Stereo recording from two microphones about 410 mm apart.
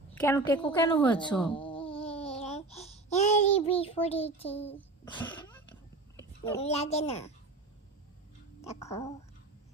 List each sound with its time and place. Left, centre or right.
0.1 s a woman's voice: centre
1.5 s a sound: centre
4.5 s a child's voice: centre
8.6 s a woman's voice: centre